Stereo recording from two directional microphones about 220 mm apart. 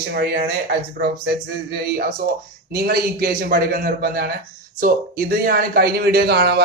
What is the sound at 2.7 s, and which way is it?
Speech, 45° right (ahead or behind).